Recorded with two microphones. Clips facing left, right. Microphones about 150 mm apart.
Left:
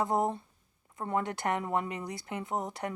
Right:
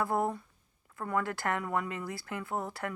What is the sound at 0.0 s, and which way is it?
Speech, 20° left (ahead or behind).